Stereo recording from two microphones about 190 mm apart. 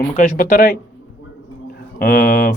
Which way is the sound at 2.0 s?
50° left (ahead or behind).